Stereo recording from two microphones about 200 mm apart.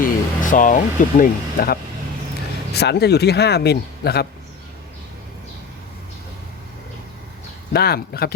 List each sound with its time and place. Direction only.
0.0 s speech: 40° left (ahead or behind)
7.7 s speech: 50° left (ahead or behind)